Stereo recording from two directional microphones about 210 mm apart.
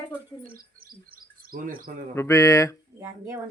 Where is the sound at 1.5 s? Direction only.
40° right (ahead or behind).